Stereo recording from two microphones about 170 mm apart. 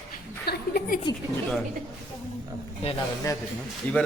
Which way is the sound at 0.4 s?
65° left (ahead or behind).